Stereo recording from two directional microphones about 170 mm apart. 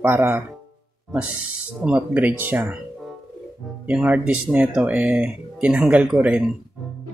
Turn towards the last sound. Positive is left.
turn(degrees=-5)  # may be behind; listen again after turning